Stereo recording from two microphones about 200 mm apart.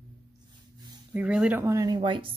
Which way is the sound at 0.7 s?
20° right (ahead or behind).